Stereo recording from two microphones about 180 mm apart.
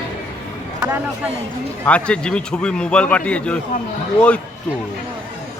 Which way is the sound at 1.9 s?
5° left (ahead or behind).